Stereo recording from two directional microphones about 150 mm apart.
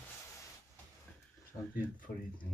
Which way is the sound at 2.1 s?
15° left (ahead or behind).